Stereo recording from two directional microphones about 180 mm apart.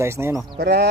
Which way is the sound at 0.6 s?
65° right (ahead or behind).